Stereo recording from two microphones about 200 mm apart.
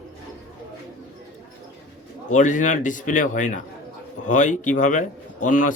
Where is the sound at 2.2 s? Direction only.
40° left (ahead or behind).